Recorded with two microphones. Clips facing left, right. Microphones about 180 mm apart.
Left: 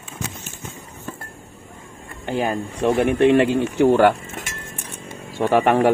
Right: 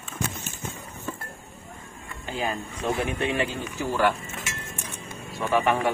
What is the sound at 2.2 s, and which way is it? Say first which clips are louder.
Speech: left 7 dB; 60° left (ahead or behind).